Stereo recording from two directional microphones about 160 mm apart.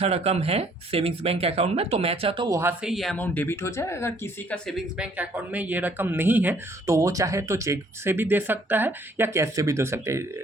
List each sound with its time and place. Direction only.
0.0 s speech: 40° right (ahead or behind)
2.5 s speech: 15° right (ahead or behind)
2.8 s speech: centre (ahead or behind); by 4.5 s 15° left (ahead or behind)
4.9 s speech: 10° right (ahead or behind)